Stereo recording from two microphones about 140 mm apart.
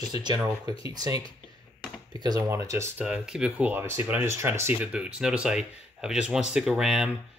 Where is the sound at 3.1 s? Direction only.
5° right (ahead or behind).